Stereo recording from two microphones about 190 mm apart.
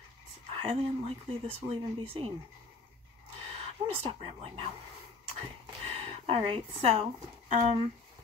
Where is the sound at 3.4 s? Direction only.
30° right (ahead or behind).